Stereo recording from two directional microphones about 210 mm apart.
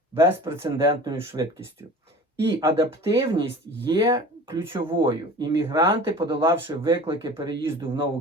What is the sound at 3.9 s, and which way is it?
Speech, 20° right (ahead or behind).